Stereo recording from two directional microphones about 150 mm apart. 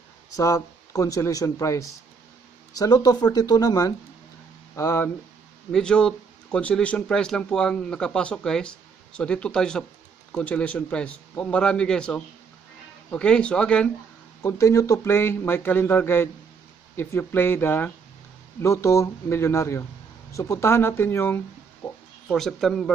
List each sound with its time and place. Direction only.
0.4 s a man's voice: 20° left (ahead or behind)
5.7 s a man's voice: 5° left (ahead or behind)
14.4 s a man's voice: 20° left (ahead or behind)
21.8 s a sound: 10° left (ahead or behind)
22.3 s speech: centre (ahead or behind)